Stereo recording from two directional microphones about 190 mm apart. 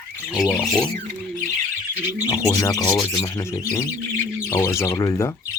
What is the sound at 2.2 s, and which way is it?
Speech, 20° left (ahead or behind).